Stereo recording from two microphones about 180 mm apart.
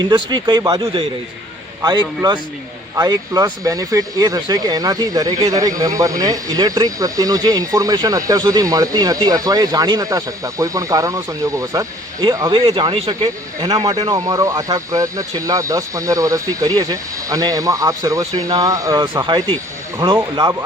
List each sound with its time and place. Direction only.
0.0 s speech: 25° right (ahead or behind)